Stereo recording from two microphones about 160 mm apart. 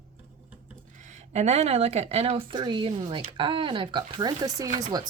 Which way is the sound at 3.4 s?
30° right (ahead or behind).